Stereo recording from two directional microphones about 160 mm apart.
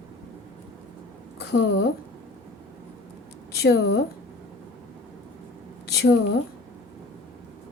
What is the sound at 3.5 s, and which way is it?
Speech, 90° left.